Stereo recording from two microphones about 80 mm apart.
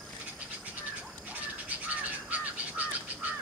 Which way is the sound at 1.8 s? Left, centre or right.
Centre.